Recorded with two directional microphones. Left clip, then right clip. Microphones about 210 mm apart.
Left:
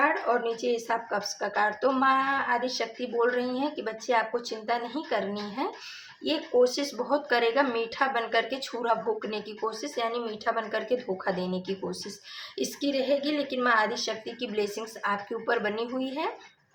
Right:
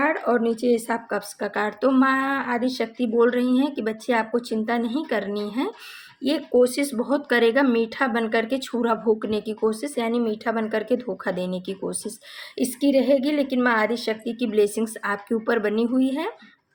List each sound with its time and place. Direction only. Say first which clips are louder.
0.0 s speech: right 4 dB; 45° right (ahead or behind)